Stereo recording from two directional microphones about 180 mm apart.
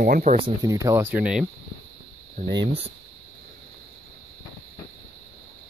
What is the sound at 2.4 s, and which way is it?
Speech, 50° right (ahead or behind).